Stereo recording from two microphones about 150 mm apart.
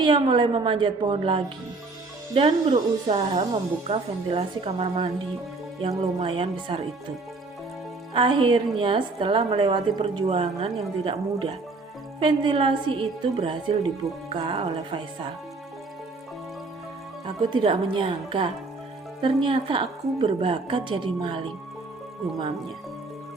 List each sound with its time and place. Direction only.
0.0 s a woman's voice: 30° right (ahead or behind)
2.6 s speech: 50° right (ahead or behind)
3.8 s a woman's voice: 40° right (ahead or behind)
8.1 s a woman's voice: 35° right (ahead or behind)
17.2 s a woman's voice: 35° right (ahead or behind)